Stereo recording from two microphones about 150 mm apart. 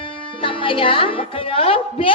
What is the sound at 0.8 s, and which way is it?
Music, 35° left (ahead or behind).